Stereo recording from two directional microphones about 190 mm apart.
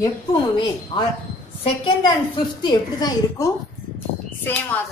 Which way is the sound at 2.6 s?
20° left (ahead or behind).